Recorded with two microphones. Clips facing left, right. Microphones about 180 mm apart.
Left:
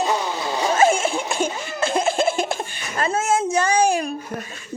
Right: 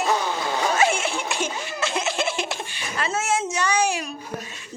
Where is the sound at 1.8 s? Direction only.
50° left (ahead or behind).